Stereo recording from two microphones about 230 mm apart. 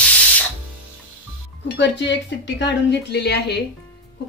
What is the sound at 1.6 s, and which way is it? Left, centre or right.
Speech, left.